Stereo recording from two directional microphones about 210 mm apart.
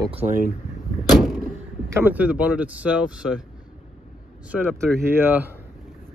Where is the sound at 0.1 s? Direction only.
30° right (ahead or behind).